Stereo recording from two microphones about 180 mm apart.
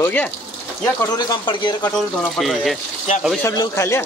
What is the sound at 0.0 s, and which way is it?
Speech, 10° left (ahead or behind).